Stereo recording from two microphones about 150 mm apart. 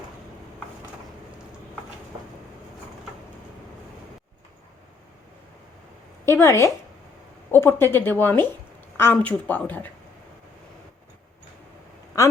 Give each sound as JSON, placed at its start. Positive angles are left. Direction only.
{"t": 6.2, "sound": "speech", "side_deg": 20}